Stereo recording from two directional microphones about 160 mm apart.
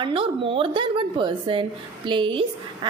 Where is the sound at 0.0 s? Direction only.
35° right (ahead or behind).